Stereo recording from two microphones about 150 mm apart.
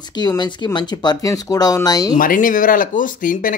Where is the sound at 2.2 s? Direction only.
65° left (ahead or behind).